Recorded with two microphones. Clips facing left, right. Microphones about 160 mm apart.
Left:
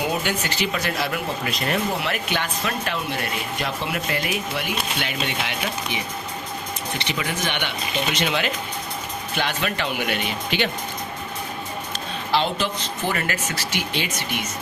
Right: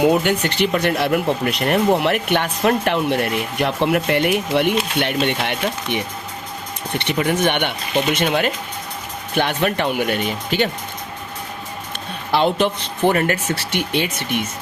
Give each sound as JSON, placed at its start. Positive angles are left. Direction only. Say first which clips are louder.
{"t": 0.0, "sound": "speech", "louder": "right 9 dB", "side_deg": -55}
{"t": 7.0, "sound": "speech", "louder": "right 10 dB", "side_deg": -55}
{"t": 12.3, "sound": "speech", "louder": "right 6 dB", "side_deg": -55}